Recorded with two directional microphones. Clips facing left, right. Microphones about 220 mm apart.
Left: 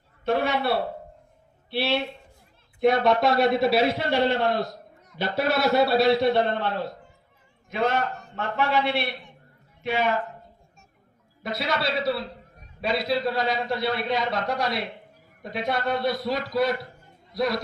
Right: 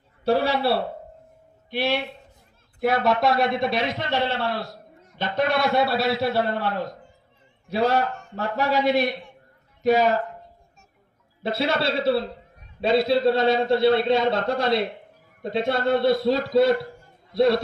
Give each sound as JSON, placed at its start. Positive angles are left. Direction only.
{"t": 0.3, "sound": "a man's voice", "side_deg": -35}
{"t": 1.7, "sound": "speech", "side_deg": -15}
{"t": 2.8, "sound": "a man's voice", "side_deg": -5}
{"t": 5.4, "sound": "a man's voice", "side_deg": 5}
{"t": 7.7, "sound": "a man's voice", "side_deg": -35}
{"t": 11.4, "sound": "a man's voice", "side_deg": -30}